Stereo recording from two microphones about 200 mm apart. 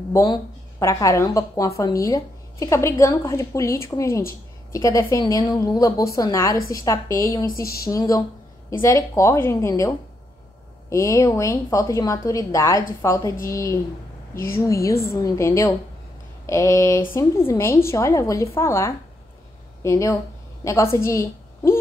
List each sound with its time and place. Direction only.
0.1 s a woman's voice: 15° left (ahead or behind)